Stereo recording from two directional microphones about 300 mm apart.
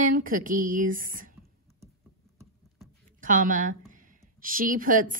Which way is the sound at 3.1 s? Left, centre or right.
Right.